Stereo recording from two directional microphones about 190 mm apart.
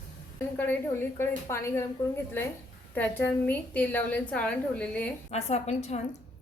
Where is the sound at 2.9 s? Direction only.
10° left (ahead or behind).